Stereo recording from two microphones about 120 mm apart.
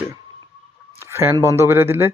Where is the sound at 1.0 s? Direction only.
20° right (ahead or behind).